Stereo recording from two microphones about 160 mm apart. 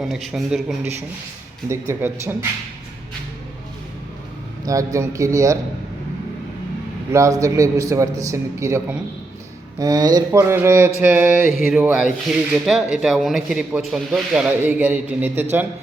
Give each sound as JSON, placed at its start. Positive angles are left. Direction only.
{"t": 0.0, "sound": "speech", "side_deg": 0}
{"t": 1.7, "sound": "mantra", "side_deg": -15}
{"t": 4.6, "sound": "a man's voice", "side_deg": -20}
{"t": 7.1, "sound": "a man's voice", "side_deg": -20}
{"t": 9.7, "sound": "mantra", "side_deg": -20}
{"t": 11.6, "sound": "speech", "side_deg": -5}